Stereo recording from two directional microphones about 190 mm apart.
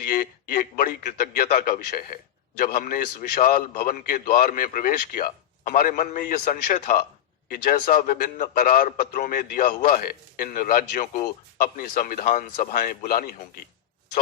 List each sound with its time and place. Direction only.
0.1 s a man's voice: 45° left (ahead or behind)